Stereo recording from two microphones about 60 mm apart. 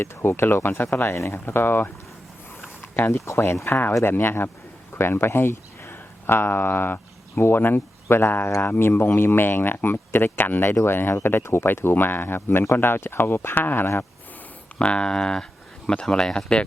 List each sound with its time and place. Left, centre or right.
0.0 s speech: left
1.1 s speech: left
2.9 s speech: left
14.8 s speech: centre